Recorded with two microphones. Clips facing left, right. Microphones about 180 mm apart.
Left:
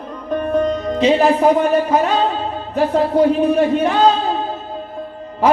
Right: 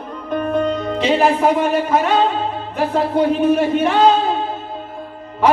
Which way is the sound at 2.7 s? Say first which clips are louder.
Left 3 dB; 35° left (ahead or behind).